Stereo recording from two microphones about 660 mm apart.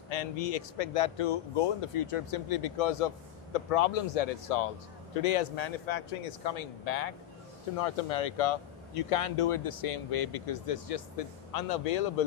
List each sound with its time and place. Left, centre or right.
0.1 s speech: left
5.1 s speech: left
7.8 s speech: left